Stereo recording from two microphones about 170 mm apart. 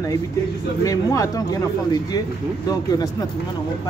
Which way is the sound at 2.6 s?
20° left (ahead or behind).